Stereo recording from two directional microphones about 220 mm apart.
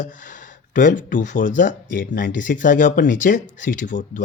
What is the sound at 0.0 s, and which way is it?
Speech, 35° left (ahead or behind).